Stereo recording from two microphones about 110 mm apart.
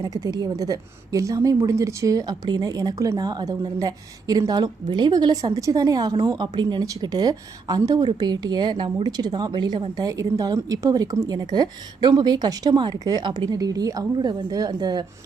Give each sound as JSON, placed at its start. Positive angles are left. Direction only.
{"t": 0.0, "sound": "a woman's voice", "side_deg": -35}